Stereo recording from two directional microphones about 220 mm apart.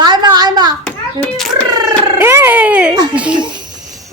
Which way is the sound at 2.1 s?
10° right (ahead or behind).